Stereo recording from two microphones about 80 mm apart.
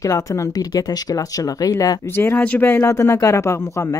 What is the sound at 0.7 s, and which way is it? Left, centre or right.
Speech, left.